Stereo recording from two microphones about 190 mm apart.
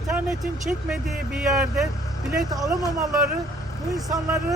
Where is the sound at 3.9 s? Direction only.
20° right (ahead or behind).